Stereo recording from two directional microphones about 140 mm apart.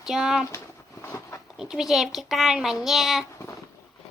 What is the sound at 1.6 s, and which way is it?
A child's voice, 5° right (ahead or behind).